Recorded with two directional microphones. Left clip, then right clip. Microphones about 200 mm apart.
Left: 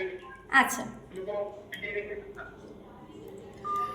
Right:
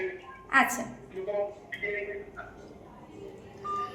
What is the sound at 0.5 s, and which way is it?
Speech, 10° right (ahead or behind).